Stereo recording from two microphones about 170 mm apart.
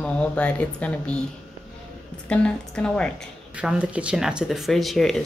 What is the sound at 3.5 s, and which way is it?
Speech, 5° right (ahead or behind).